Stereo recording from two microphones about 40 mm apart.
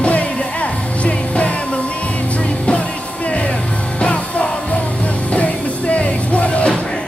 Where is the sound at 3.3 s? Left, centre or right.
Left.